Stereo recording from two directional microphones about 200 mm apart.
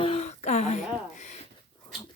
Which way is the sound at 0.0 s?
30° left (ahead or behind).